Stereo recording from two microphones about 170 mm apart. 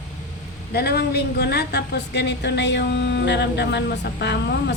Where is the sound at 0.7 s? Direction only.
70° left (ahead or behind).